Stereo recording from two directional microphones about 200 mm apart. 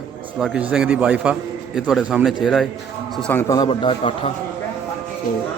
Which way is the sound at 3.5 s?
20° left (ahead or behind).